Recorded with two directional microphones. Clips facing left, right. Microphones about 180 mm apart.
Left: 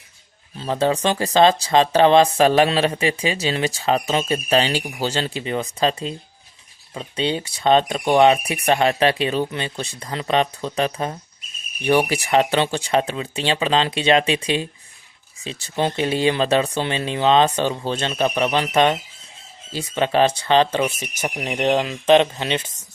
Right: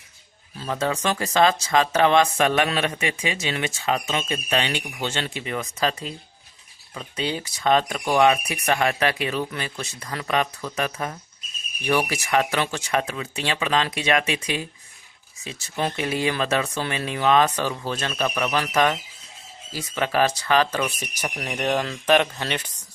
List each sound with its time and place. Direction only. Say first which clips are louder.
0.5 s speech: left 5 dB; 30° left (ahead or behind)